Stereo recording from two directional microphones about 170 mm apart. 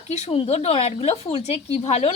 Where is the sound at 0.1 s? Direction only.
35° left (ahead or behind).